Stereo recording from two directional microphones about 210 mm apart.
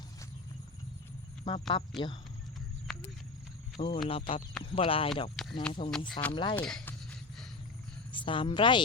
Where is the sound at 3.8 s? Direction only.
30° left (ahead or behind).